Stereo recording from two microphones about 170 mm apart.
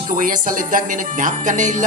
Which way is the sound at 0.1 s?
55° right (ahead or behind).